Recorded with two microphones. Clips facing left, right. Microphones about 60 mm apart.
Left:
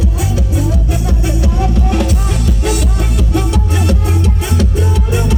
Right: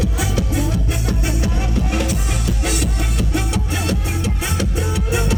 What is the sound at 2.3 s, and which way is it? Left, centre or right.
Music, centre.